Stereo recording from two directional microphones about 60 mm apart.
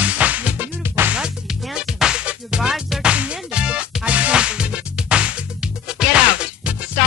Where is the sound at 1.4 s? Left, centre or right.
Centre.